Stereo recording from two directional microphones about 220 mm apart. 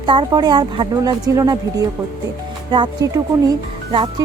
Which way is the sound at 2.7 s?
20° right (ahead or behind).